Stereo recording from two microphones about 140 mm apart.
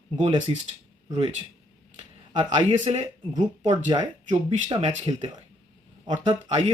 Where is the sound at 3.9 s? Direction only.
35° right (ahead or behind).